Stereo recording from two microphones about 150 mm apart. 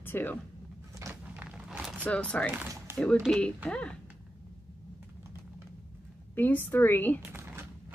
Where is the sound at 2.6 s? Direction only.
20° right (ahead or behind).